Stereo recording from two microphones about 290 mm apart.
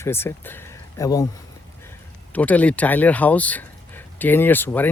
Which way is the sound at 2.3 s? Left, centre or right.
Centre.